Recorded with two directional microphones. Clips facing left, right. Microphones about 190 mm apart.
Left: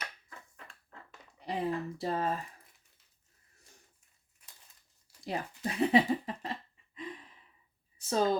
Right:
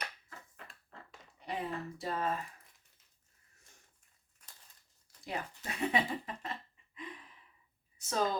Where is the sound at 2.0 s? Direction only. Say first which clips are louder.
Left 3 dB; 35° left (ahead or behind).